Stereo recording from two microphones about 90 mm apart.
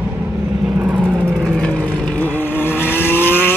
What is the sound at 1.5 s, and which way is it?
Vehicle, 10° left (ahead or behind).